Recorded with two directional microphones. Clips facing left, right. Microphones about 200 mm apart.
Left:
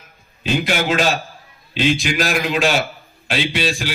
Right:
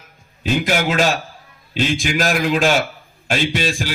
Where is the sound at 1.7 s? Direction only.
45° right (ahead or behind).